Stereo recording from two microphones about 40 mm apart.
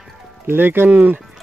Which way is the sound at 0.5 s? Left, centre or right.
Right.